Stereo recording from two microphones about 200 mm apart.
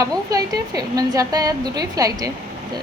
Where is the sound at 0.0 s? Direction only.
15° right (ahead or behind).